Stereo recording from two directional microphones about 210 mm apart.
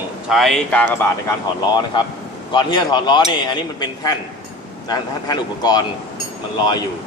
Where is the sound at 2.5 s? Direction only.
20° left (ahead or behind).